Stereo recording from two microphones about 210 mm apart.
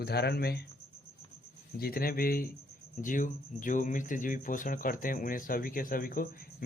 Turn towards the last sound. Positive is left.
turn(degrees=45)  # may be behind; listen again after turning